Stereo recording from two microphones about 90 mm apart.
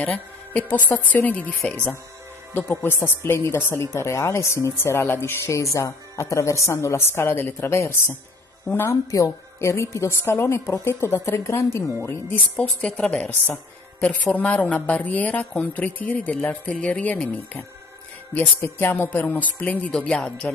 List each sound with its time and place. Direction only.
0.0 s a woman's voice: 15° left (ahead or behind); by 8.1 s 30° left (ahead or behind)
9.1 s a woman's voice: 35° left (ahead or behind)
12.5 s a woman's voice: 10° left (ahead or behind)